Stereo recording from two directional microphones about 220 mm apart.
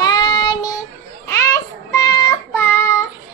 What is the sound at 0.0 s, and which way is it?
Child singing, 20° left (ahead or behind).